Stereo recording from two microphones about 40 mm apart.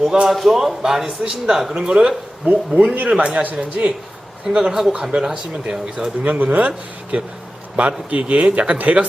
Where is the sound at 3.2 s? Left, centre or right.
Right.